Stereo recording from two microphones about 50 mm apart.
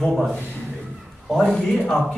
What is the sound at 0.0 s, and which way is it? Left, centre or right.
Speech, centre.